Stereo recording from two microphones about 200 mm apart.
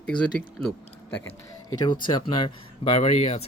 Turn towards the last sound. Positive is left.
turn(degrees=30)  # may be behind; listen again after turning